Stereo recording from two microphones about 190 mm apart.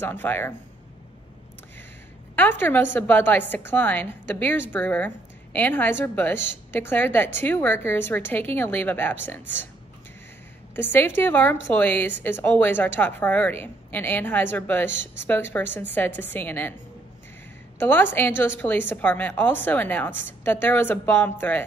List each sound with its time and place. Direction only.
0.0 s a woman's voice: 10° left (ahead or behind)
2.3 s a woman's voice: 10° left (ahead or behind)
10.8 s a woman's voice: 10° left (ahead or behind)
14.9 s speech: 70° right (ahead or behind)
15.2 s a woman's voice: 10° left (ahead or behind)
17.7 s a woman's voice: 10° left (ahead or behind)